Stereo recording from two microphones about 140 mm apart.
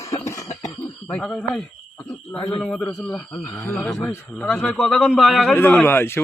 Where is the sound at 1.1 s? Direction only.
5° left (ahead or behind).